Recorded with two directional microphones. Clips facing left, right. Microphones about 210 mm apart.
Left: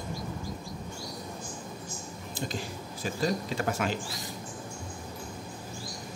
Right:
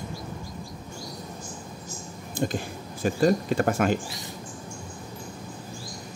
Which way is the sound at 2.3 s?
50° right (ahead or behind).